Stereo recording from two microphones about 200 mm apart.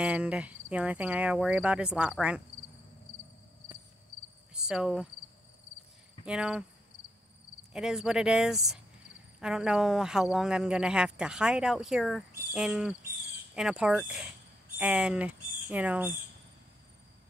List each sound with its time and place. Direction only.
0.0 s speech: 5° right (ahead or behind)
4.6 s cricket: 5° right (ahead or behind)
6.2 s speech: 5° right (ahead or behind)
7.7 s speech: centre (ahead or behind)